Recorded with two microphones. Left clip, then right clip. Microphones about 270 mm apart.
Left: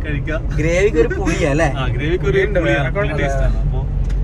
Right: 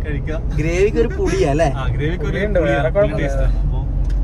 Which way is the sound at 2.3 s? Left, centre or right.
Right.